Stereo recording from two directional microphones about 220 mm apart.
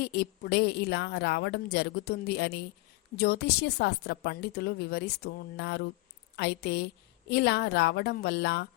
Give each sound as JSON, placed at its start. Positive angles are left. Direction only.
{"t": 0.0, "sound": "a woman's voice", "side_deg": 50}